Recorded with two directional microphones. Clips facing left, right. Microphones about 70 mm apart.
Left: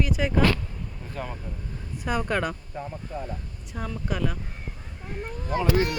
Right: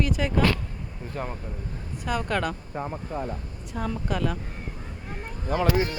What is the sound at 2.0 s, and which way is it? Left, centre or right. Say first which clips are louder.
Speech: even; left.